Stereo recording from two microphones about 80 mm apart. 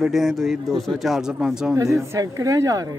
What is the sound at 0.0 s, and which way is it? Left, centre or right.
Speech, centre.